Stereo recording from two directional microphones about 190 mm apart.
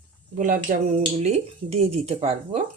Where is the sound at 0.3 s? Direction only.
45° right (ahead or behind).